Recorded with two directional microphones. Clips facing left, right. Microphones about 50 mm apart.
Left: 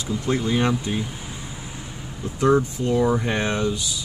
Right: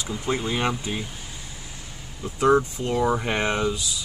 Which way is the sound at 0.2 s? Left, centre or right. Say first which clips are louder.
Left 3 dB; centre.